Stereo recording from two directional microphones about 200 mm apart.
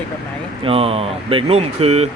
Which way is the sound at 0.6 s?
30° right (ahead or behind).